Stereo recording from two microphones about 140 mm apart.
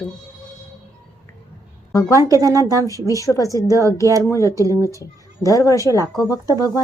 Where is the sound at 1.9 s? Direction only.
25° left (ahead or behind).